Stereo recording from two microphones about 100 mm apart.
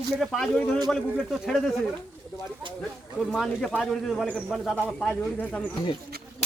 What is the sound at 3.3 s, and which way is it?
Speech, centre (ahead or behind).